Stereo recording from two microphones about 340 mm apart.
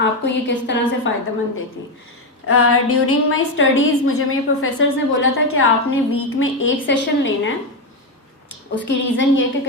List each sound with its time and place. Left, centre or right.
0.0 s a woman's voice: left
2.5 s a woman's voice: left
8.7 s a woman's voice: left